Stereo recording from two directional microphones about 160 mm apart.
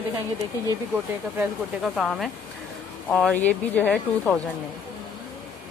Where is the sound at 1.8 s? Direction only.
Centre (ahead or behind).